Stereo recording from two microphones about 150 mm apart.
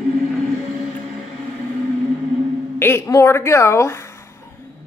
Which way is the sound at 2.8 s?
15° left (ahead or behind).